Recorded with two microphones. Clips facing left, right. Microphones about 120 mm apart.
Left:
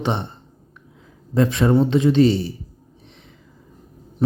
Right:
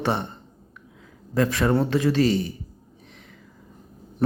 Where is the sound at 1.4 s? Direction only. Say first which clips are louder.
Left 4 dB; 25° left (ahead or behind).